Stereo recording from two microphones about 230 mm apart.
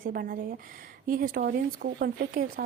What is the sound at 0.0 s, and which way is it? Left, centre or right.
A woman's voice, right.